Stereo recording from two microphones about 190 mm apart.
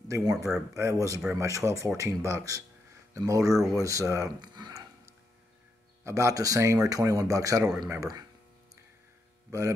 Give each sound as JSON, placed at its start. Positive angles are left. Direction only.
{"t": 0.1, "sound": "speech", "side_deg": -15}
{"t": 6.0, "sound": "speech", "side_deg": -15}
{"t": 9.5, "sound": "speech", "side_deg": -15}